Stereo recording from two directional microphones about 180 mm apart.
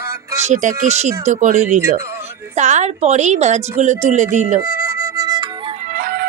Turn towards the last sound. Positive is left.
turn(degrees=-55)  # may be behind; listen again after turning